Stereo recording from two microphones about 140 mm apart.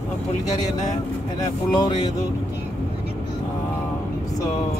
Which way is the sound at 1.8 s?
30° left (ahead or behind).